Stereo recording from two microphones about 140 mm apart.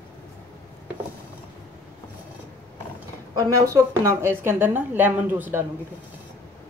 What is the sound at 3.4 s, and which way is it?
A woman's voice, 20° right (ahead or behind).